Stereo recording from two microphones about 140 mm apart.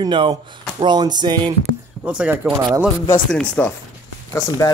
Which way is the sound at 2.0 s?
10° right (ahead or behind).